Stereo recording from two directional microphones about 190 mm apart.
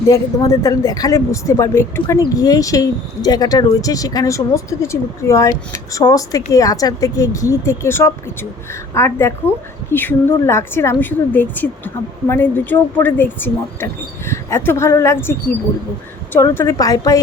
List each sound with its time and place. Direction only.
0.6 s speech: 15° left (ahead or behind)